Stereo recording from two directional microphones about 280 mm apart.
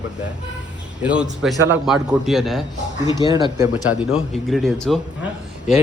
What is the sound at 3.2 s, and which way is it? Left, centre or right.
Speech, centre.